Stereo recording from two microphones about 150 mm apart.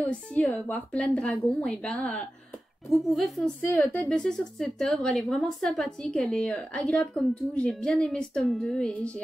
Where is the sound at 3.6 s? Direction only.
10° left (ahead or behind).